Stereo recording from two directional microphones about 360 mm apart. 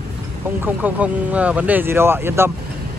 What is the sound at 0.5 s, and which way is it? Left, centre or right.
Speech, centre.